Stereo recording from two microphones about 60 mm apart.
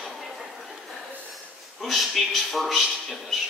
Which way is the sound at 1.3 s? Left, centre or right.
Centre.